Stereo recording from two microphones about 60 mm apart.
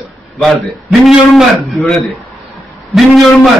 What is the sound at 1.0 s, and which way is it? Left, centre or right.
Speech, centre.